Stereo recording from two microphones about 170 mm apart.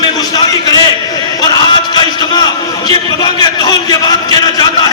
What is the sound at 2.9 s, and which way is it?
A man's voice, 25° left (ahead or behind).